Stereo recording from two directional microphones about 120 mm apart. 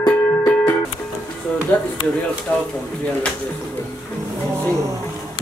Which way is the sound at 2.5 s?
20° left (ahead or behind).